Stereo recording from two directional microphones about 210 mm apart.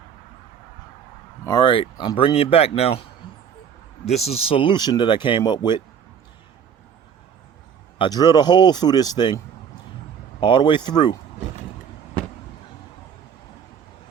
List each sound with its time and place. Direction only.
1.5 s speech: 20° left (ahead or behind)
4.0 s speech: 30° left (ahead or behind)
7.9 s speech: 20° left (ahead or behind)
10.4 s speech: 20° left (ahead or behind)